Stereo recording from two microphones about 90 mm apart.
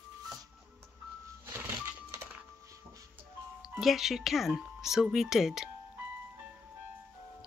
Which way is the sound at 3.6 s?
5° right (ahead or behind).